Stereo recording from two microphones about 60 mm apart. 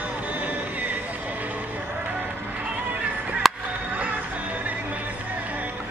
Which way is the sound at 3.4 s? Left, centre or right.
Centre.